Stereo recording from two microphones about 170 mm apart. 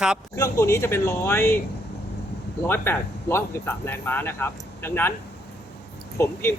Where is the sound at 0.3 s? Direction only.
20° left (ahead or behind).